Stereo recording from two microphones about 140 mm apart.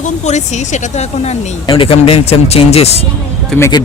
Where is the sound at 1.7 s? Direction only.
40° left (ahead or behind).